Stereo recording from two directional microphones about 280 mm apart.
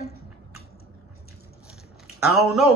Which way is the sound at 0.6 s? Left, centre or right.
Left.